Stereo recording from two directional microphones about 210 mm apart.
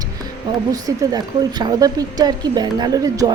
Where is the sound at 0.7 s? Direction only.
15° right (ahead or behind).